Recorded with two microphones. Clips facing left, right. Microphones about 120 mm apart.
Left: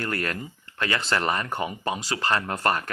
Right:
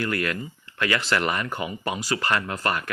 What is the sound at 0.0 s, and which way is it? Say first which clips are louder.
Speech: right 2 dB; 40° left (ahead or behind).